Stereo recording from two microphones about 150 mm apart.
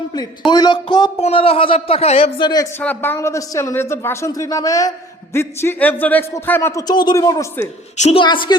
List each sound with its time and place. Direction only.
0.1 s speech: 25° left (ahead or behind); by 2.3 s 40° left (ahead or behind)
2.4 s speech: 30° left (ahead or behind)
2.7 s speech: 15° left (ahead or behind)
7.9 s a woman's voice: 50° left (ahead or behind)
8.2 s speech: 30° left (ahead or behind)